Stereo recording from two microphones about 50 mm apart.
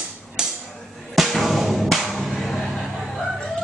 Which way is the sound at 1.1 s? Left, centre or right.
Centre.